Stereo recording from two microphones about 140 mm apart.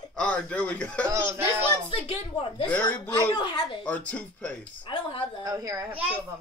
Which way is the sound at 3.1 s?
35° left (ahead or behind).